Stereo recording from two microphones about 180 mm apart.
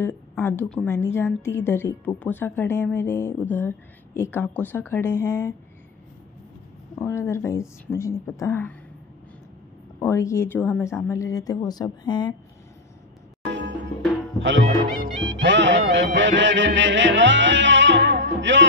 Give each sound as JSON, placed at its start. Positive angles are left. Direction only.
{"t": 0.0, "sound": "a woman's voice", "side_deg": 10}
{"t": 7.0, "sound": "a woman's voice", "side_deg": 15}
{"t": 9.9, "sound": "a woman's voice", "side_deg": 15}
{"t": 13.5, "sound": "music", "side_deg": -80}
{"t": 15.3, "sound": "speech", "side_deg": -90}
{"t": 15.9, "sound": "music", "side_deg": -85}